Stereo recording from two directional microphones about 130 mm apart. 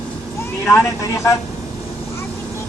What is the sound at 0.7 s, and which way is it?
Speech, 25° left (ahead or behind).